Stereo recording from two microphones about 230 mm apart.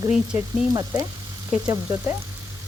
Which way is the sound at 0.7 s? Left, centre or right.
Centre.